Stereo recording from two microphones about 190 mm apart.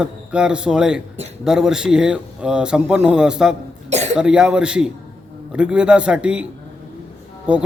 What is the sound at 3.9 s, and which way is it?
Cough, 35° right (ahead or behind).